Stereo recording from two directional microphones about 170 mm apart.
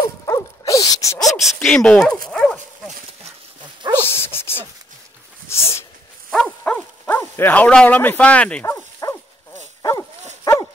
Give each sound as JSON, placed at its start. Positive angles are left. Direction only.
{"t": 0.2, "sound": "dog", "side_deg": 20}
{"t": 1.3, "sound": "speech", "side_deg": 0}
{"t": 2.2, "sound": "dog", "side_deg": 5}
{"t": 3.9, "sound": "dog", "side_deg": 15}
{"t": 5.5, "sound": "a sound", "side_deg": 15}
{"t": 6.3, "sound": "bow-wow", "side_deg": 5}
{"t": 9.0, "sound": "dog", "side_deg": 25}